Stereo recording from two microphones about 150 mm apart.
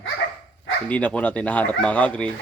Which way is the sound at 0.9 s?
10° left (ahead or behind).